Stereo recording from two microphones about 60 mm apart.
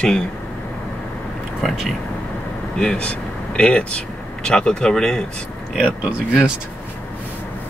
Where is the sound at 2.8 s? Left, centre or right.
Centre.